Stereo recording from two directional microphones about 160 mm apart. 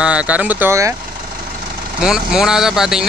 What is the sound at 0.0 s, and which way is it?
Speech, 5° right (ahead or behind).